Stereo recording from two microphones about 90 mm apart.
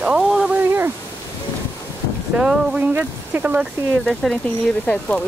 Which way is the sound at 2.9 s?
20° right (ahead or behind).